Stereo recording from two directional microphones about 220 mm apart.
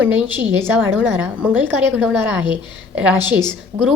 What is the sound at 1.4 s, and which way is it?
Speech, 10° right (ahead or behind).